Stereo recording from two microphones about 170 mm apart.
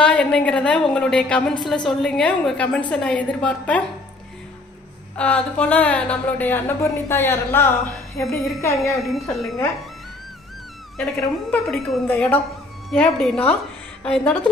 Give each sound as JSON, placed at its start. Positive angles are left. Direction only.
{"t": 0.0, "sound": "a woman's voice", "side_deg": 5}
{"t": 5.1, "sound": "a woman's voice", "side_deg": 5}
{"t": 8.9, "sound": "a woman's voice", "side_deg": 0}
{"t": 11.0, "sound": "a woman's voice", "side_deg": 0}